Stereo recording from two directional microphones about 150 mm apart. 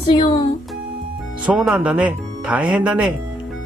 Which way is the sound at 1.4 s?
5° right (ahead or behind).